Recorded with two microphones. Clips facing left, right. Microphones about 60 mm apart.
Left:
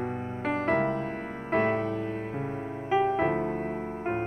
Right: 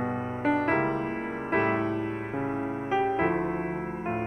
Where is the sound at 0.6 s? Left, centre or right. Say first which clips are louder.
Even; right.